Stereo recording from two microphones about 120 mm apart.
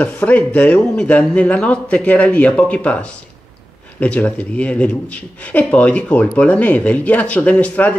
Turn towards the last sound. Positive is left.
turn(degrees=10)  # may be behind; listen again after turning